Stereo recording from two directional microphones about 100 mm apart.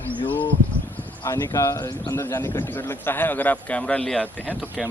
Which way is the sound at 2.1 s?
25° left (ahead or behind).